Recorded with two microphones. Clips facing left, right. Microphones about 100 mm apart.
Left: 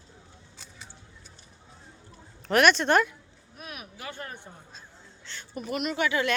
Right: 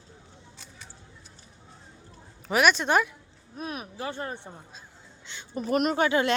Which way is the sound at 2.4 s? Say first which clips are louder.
Left 1 dB; 5° right (ahead or behind).